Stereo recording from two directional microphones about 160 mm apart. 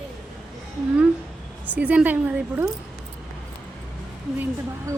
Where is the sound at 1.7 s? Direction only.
10° right (ahead or behind).